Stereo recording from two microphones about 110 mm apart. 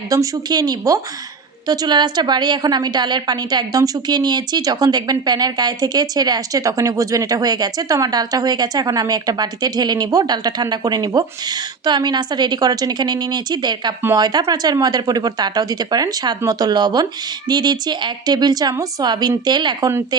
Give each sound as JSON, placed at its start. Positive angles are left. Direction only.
{"t": 0.1, "sound": "a woman's voice", "side_deg": -35}